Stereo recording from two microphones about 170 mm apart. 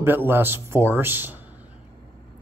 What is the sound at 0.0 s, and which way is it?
Speech, 10° right (ahead or behind).